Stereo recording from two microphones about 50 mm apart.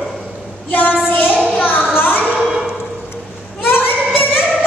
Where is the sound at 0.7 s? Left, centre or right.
Left.